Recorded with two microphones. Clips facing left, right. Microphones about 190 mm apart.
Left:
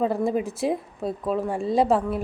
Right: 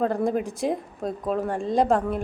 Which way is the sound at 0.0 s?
5° left (ahead or behind).